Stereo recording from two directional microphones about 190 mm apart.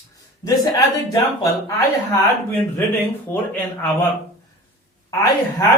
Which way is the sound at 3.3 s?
10° left (ahead or behind).